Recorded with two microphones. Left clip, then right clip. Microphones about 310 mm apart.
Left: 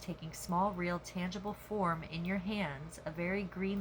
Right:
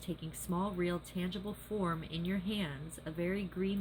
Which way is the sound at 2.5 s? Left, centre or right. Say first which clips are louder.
Left 1 dB; centre.